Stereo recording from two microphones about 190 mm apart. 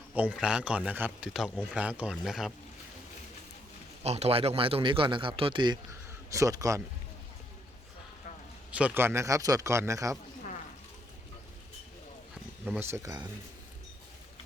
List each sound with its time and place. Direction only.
0.2 s speech: 5° right (ahead or behind)
4.0 s a man's voice: 35° right (ahead or behind); by 6.8 s 15° right (ahead or behind)
8.7 s a man's voice: 10° right (ahead or behind)
12.8 s a man's voice: 15° right (ahead or behind)